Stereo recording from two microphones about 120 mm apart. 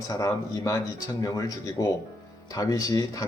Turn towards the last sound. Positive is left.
turn(degrees=30)  # may be behind; listen again after turning